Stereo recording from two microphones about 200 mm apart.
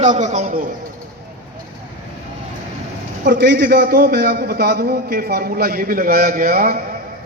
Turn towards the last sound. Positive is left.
turn(degrees=-45)  # may be behind; listen again after turning